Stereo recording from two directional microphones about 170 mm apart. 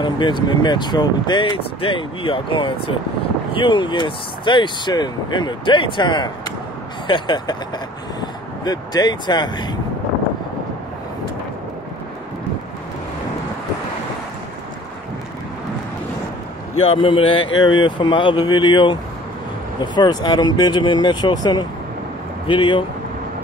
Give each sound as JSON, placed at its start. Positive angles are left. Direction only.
{"t": 0.0, "sound": "speech", "side_deg": 25}
{"t": 16.8, "sound": "speech", "side_deg": 30}